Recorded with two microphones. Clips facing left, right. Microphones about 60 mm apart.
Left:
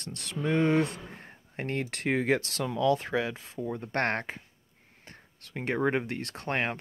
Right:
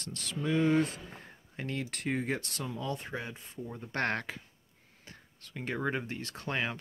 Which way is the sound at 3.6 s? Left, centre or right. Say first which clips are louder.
Left 4 dB; left.